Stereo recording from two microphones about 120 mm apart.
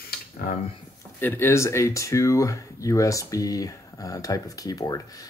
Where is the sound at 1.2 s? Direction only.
20° left (ahead or behind).